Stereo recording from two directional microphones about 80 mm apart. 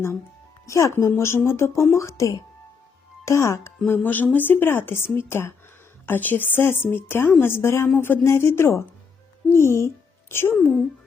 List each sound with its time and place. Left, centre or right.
0.6 s speech: left
3.8 s a woman's voice: left